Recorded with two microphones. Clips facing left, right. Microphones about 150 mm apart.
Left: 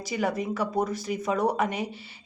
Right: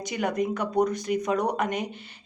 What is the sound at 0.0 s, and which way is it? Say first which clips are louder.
A woman's voice: right 1 dB; 5° left (ahead or behind).